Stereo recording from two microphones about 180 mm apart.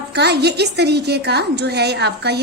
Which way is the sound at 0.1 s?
70° right (ahead or behind).